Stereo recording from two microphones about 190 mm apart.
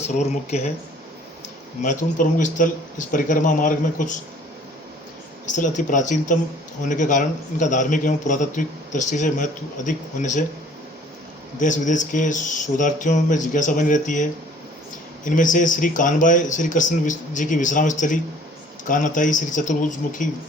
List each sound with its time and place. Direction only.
0.1 s a man's voice: 35° left (ahead or behind)
1.8 s speech: 40° left (ahead or behind)
5.5 s a man's voice: 40° left (ahead or behind)
11.6 s a man's voice: 40° left (ahead or behind)